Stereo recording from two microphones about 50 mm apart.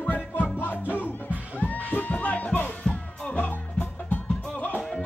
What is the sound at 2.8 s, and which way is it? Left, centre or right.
Music, centre.